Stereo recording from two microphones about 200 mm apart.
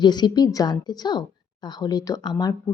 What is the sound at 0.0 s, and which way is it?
Speech, 20° left (ahead or behind).